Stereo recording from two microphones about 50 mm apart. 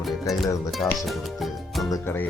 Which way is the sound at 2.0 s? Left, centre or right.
Left.